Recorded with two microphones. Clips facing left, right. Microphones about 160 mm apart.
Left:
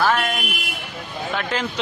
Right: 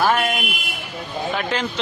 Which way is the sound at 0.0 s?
10° right (ahead or behind).